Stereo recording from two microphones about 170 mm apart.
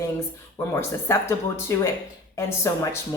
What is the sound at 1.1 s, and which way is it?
A woman's voice, 15° left (ahead or behind).